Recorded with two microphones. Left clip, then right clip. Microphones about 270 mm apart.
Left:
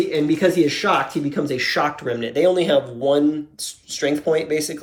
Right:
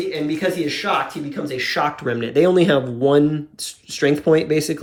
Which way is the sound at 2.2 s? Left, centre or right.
Centre.